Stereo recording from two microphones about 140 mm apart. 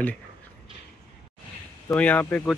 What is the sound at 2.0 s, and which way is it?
Speech, 10° left (ahead or behind).